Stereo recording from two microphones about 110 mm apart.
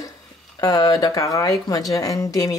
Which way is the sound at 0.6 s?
35° left (ahead or behind).